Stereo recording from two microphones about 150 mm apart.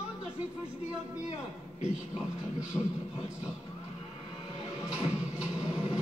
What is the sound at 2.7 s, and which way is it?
Speech, 10° left (ahead or behind).